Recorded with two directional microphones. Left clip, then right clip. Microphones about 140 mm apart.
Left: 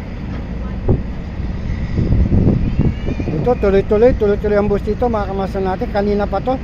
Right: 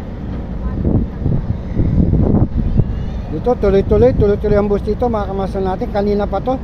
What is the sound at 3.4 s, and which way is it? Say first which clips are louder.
Speech: right 1 dB; 10° right (ahead or behind).